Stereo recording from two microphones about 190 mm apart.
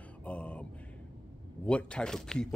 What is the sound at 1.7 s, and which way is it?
Speech, 5° left (ahead or behind).